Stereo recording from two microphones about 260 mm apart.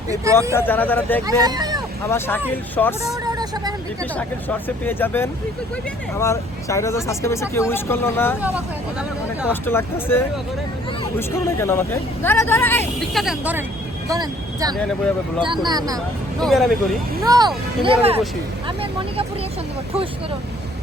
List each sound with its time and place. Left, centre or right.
0.5 s speech: centre
1.5 s a sound: centre
2.0 s speech: centre
3.2 s vehicle: centre
4.1 s speech: centre
8.4 s speech: centre
9.5 s speech: centre
14.8 s speech: centre
15.6 s speech: centre
16.4 s speech: centre
17.2 s speech: centre